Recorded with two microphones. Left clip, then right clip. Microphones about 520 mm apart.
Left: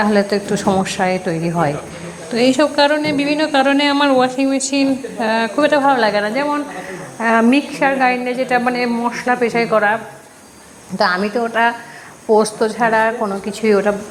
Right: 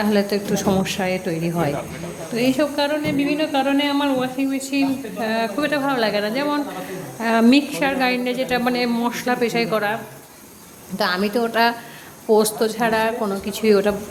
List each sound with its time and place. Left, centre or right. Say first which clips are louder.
0.0 s a woman's voice: left 5 dB; right